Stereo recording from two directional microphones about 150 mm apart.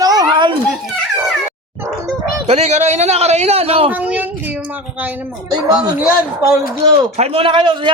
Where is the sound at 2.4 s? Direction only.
45° right (ahead or behind).